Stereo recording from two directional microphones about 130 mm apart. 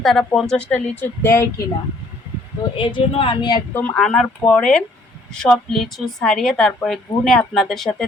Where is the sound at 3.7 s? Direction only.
15° left (ahead or behind).